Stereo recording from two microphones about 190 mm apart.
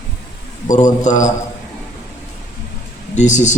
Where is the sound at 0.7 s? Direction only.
40° left (ahead or behind).